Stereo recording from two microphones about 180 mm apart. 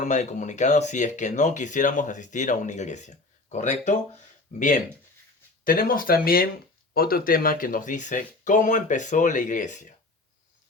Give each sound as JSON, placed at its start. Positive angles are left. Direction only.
{"t": 0.0, "sound": "speech", "side_deg": 40}
{"t": 5.6, "sound": "speech", "side_deg": 50}